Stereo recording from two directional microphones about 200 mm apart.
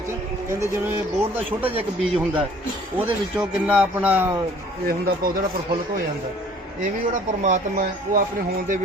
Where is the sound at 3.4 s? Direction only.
5° right (ahead or behind).